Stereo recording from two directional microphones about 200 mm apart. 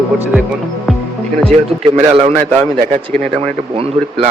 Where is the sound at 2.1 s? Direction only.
30° right (ahead or behind).